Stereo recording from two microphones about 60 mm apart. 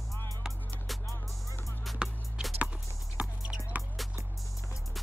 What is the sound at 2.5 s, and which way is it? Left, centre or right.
Music, right.